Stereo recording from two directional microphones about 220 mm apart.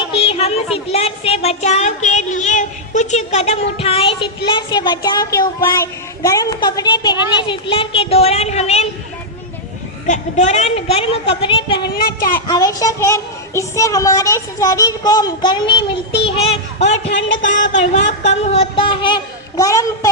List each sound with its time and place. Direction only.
0.1 s a sound: 25° left (ahead or behind)
7.3 s speech: 20° left (ahead or behind)
10.1 s speech: 30° left (ahead or behind)
11.8 s a child's voice: 45° left (ahead or behind)
12.5 s child singing: 15° left (ahead or behind)
17.5 s speech: 30° left (ahead or behind); by 20.1 s 15° left (ahead or behind)